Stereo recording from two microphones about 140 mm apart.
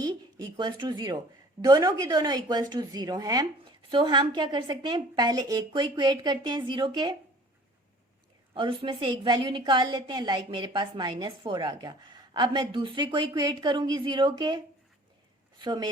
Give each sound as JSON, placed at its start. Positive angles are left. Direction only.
{"t": 0.0, "sound": "a woman's voice", "side_deg": -30}
{"t": 8.5, "sound": "a woman's voice", "side_deg": -35}